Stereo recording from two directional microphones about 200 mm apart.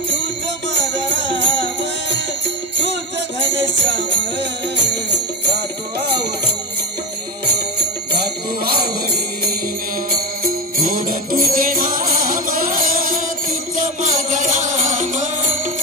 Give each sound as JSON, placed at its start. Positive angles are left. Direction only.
{"t": 0.7, "sound": "music", "side_deg": -65}
{"t": 5.9, "sound": "music", "side_deg": -55}
{"t": 8.6, "sound": "music", "side_deg": -50}
{"t": 10.4, "sound": "music", "side_deg": -45}